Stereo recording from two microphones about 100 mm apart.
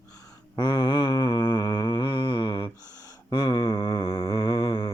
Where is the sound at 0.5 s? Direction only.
50° left (ahead or behind).